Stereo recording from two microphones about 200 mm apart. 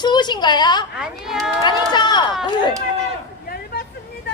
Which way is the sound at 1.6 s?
20° left (ahead or behind).